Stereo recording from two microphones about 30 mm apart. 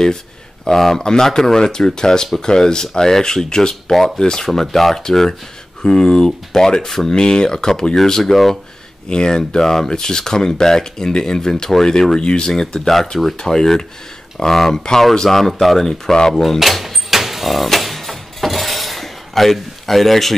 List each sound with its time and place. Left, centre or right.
0.7 s speech: centre
4.6 s speech: centre
5.8 s speech: centre
6.9 s speech: centre
7.2 s speech: left; by 8.5 s centre
9.1 s speech: left
9.6 s speech: centre
12.8 s speech: centre
13.4 s speech: centre
15.9 s speech: centre
16.5 s door: centre